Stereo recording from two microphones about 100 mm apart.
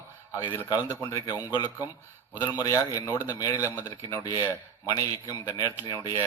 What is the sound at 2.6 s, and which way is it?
A man's voice, 35° left (ahead or behind).